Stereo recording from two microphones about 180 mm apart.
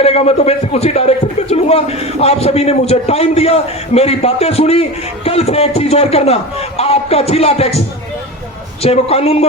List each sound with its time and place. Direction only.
0.0 s a man's voice: 35° left (ahead or behind)
8.8 s a man's voice: 35° left (ahead or behind)